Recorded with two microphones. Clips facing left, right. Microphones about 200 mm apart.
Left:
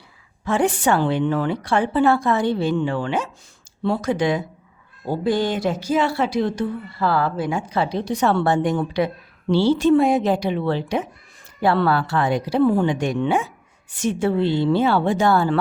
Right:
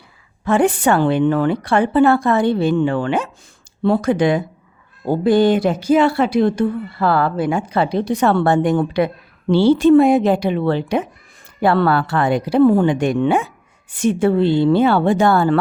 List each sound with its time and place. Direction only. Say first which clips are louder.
0.4 s speech: right 4 dB; 55° right (ahead or behind)